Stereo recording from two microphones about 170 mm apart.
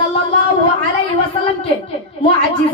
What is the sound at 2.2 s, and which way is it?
Speech, 30° left (ahead or behind).